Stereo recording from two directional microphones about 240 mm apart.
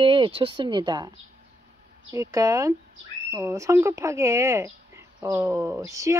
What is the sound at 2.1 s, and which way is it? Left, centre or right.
Speech, centre.